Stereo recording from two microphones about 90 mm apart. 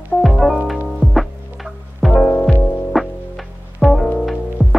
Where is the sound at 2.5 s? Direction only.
20° left (ahead or behind).